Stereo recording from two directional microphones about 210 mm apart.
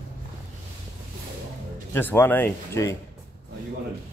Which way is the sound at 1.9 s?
10° left (ahead or behind).